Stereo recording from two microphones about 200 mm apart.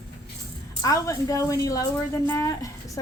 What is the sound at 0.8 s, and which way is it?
A woman's voice, 15° left (ahead or behind).